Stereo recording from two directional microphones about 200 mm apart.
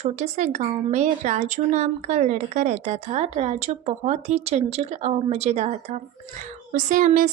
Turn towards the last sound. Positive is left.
turn(degrees=-40)  # may be behind; listen again after turning